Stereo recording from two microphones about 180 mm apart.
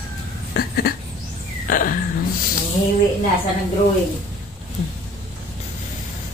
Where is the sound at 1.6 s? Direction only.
50° left (ahead or behind).